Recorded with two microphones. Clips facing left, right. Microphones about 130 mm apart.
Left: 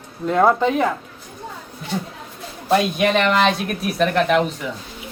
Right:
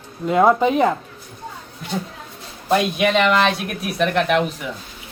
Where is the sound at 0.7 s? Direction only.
20° right (ahead or behind).